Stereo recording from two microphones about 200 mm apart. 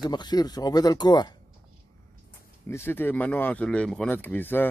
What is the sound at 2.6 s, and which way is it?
Speech, 10° left (ahead or behind).